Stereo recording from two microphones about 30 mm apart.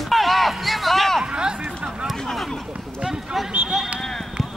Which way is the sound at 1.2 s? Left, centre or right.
Right.